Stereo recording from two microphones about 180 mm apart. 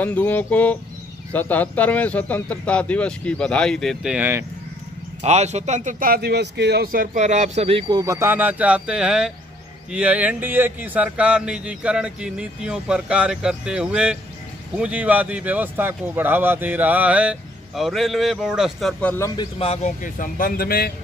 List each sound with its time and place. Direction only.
0.0 s speech: 10° left (ahead or behind); by 4.5 s 10° right (ahead or behind)
5.2 s a man's voice: 40° right (ahead or behind)
8.0 s speech: 15° right (ahead or behind); by 19.4 s 15° left (ahead or behind)
19.6 s speech: 40° left (ahead or behind); by 20.9 s 55° left (ahead or behind)